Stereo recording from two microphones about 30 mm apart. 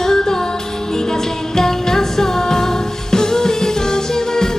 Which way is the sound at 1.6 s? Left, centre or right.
Centre.